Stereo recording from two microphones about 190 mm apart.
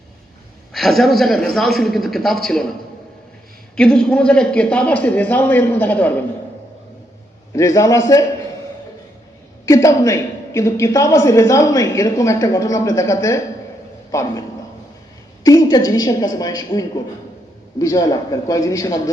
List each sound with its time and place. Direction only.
0.7 s a man's voice: centre (ahead or behind)
3.8 s a woman's voice: 5° left (ahead or behind)
7.5 s a woman's voice: 15° left (ahead or behind)
9.6 s a woman's voice: 15° left (ahead or behind)
15.4 s a woman's voice: 20° left (ahead or behind)